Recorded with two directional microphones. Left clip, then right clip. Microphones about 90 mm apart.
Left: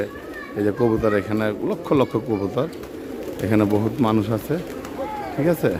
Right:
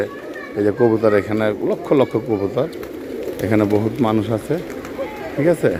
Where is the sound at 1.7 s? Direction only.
35° left (ahead or behind).